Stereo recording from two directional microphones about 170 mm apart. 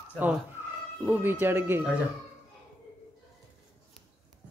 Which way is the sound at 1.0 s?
10° right (ahead or behind).